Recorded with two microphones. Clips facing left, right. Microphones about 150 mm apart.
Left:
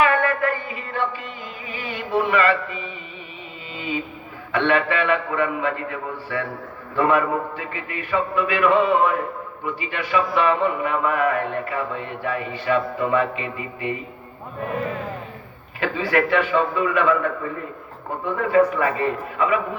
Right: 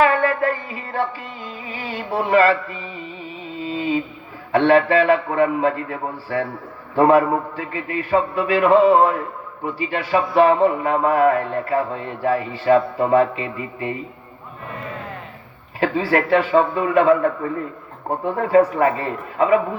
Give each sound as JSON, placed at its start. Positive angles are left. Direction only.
{"t": 0.0, "sound": "a sound", "side_deg": -30}
{"t": 3.6, "sound": "mantra", "side_deg": -30}
{"t": 4.5, "sound": "speech", "side_deg": -35}
{"t": 15.8, "sound": "speech", "side_deg": -35}